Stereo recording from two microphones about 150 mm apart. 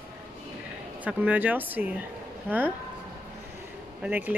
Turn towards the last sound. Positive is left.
turn(degrees=-10)  # may be behind; listen again after turning